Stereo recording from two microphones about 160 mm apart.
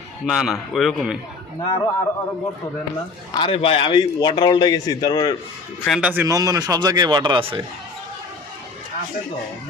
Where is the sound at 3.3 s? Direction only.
30° left (ahead or behind).